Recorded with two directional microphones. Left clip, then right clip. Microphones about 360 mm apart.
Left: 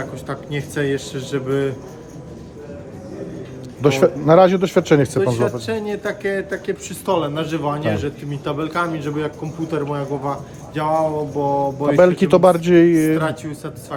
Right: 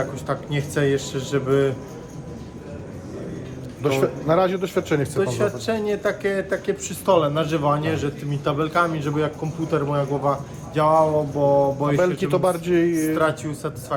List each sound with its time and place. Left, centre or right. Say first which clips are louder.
0.0 s speech: right 2 dB; centre
3.8 s a man's voice: left 6 dB; left
5.2 s speech: left 3 dB; centre
11.9 s a man's voice: left 12 dB; left
13.1 s speech: right 1 dB; centre